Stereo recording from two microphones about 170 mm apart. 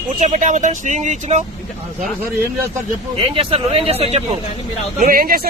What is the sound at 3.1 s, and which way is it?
Speech, 30° right (ahead or behind).